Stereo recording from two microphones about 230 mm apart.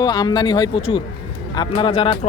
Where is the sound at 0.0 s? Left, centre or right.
Centre.